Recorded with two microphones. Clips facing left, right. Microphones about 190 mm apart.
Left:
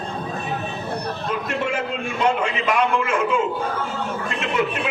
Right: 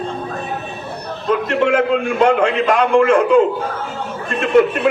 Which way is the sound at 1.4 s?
60° right (ahead or behind).